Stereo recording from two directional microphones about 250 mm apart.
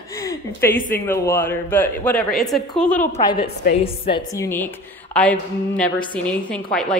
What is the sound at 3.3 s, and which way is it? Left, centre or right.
Speech, left.